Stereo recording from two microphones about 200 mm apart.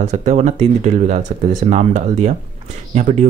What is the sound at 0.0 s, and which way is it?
Speech, 35° right (ahead or behind).